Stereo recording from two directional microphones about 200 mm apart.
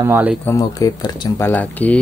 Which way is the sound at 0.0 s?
10° right (ahead or behind).